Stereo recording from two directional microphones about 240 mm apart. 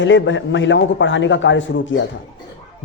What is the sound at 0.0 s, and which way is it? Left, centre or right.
A man's voice, left.